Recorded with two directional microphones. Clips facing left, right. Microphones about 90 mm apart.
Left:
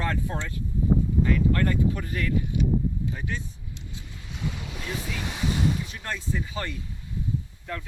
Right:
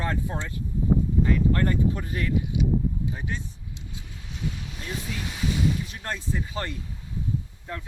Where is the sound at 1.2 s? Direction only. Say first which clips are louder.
Even; 20° right (ahead or behind).